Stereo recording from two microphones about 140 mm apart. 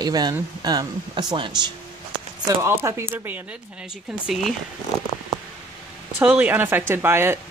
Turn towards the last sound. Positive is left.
turn(degrees=-15)  # may be behind; listen again after turning